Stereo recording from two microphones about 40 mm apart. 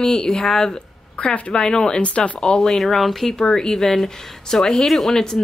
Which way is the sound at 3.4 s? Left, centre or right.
Centre.